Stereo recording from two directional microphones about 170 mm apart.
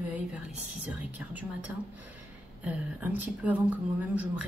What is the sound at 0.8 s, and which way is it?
A woman's voice, 10° right (ahead or behind).